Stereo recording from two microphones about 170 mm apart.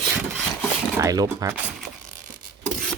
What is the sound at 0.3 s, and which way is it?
Wood, centre (ahead or behind).